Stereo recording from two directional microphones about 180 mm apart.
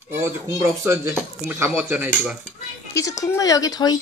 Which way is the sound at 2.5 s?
15° left (ahead or behind).